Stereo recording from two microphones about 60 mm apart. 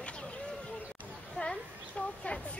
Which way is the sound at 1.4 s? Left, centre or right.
Centre.